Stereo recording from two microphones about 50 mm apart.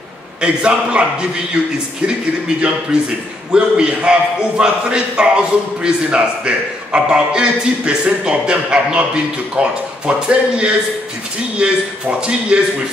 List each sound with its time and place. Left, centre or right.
0.4 s a man's voice: centre
3.5 s a man's voice: centre